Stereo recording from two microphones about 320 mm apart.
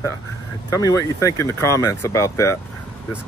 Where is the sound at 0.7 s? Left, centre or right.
Centre.